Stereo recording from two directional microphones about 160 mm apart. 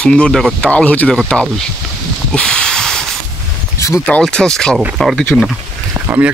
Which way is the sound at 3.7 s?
20° left (ahead or behind).